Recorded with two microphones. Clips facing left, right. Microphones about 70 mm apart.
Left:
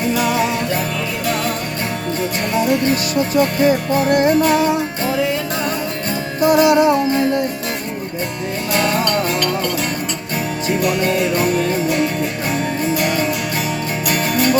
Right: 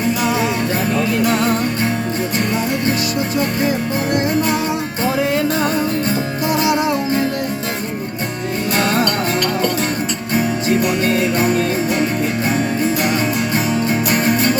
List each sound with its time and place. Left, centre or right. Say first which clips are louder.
4.1 s music: left 4 dB; left
6.4 s music: left 7 dB; left
14.1 s music: left 1 dB; right